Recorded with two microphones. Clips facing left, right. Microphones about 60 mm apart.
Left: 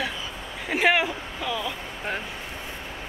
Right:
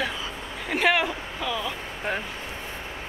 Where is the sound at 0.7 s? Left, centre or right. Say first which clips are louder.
Left 1 dB; centre.